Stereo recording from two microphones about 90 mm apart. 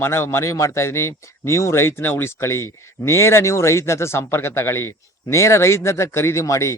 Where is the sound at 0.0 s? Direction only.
30° left (ahead or behind).